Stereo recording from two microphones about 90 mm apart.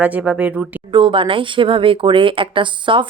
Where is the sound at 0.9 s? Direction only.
65° right (ahead or behind).